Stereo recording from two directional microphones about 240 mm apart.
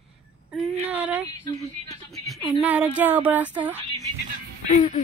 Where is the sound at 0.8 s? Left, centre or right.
Centre.